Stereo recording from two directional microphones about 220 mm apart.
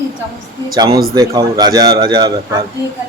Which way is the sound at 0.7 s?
20° right (ahead or behind).